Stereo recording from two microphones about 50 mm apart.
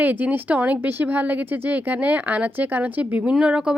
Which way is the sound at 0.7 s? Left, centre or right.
Right.